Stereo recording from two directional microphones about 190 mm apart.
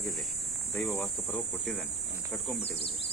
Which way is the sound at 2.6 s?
60° left (ahead or behind).